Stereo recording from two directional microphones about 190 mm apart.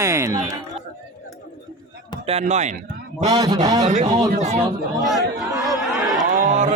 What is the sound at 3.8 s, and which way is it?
Speech, 35° right (ahead or behind).